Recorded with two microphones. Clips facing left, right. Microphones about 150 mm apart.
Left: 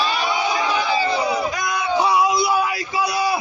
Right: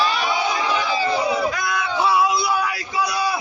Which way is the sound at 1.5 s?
15° left (ahead or behind).